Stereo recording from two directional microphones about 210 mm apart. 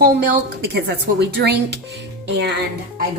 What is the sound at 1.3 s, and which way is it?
Speech, 55° right (ahead or behind).